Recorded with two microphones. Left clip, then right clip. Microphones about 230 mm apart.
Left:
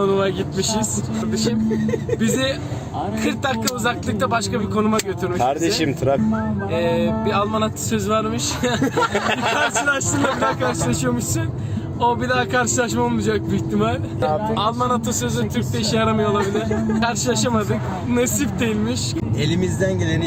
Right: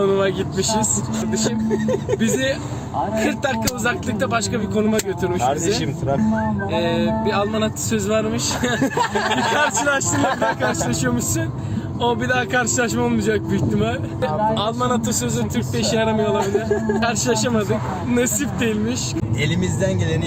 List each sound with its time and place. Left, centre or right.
0.0 s speech: centre
5.4 s speech: left
6.7 s speech: centre